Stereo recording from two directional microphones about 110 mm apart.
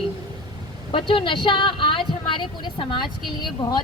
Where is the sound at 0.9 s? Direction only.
50° left (ahead or behind).